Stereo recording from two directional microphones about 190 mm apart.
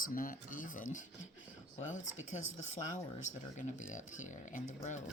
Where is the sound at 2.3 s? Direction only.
40° left (ahead or behind).